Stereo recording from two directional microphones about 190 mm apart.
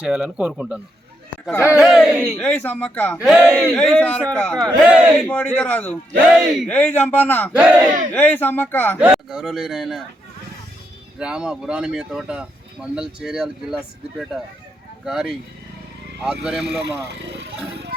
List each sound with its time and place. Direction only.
0.0 s speech: 5° right (ahead or behind)
1.5 s a man's voice: 15° left (ahead or behind)
1.8 s speech: centre (ahead or behind)
2.4 s a man's voice: 5° left (ahead or behind)
3.2 s speech: 5° right (ahead or behind)
4.8 s a man's voice: 5° right (ahead or behind)
5.2 s a man's voice: 10° left (ahead or behind)
7.5 s speech: 5° right (ahead or behind)
8.1 s a man's voice: 10° left (ahead or behind)
9.0 s speech: 5° right (ahead or behind)
11.2 s speech: 5° right (ahead or behind)